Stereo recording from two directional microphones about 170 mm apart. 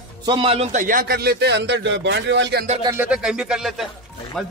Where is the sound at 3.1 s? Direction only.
5° right (ahead or behind).